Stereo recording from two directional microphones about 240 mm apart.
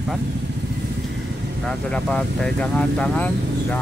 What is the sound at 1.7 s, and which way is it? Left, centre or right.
Speech, centre.